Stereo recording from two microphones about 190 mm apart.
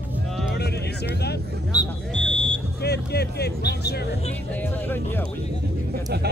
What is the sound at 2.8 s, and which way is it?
Vehicle, 60° left (ahead or behind).